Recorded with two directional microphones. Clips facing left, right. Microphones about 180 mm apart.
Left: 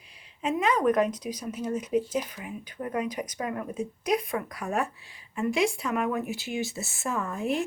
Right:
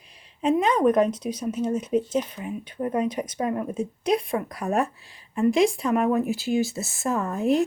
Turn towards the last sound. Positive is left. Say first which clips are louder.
# right 6 dB
turn(degrees=-40)  # may be behind; listen again after turning